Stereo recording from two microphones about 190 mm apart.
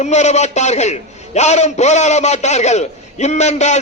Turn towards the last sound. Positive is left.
turn(degrees=35)  # may be behind; listen again after turning